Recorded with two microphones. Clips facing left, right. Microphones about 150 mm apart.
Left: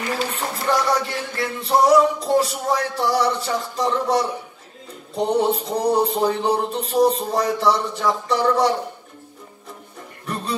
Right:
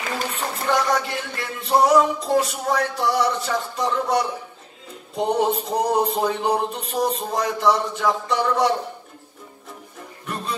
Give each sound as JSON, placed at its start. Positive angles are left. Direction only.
{"t": 0.3, "sound": "music", "side_deg": 35}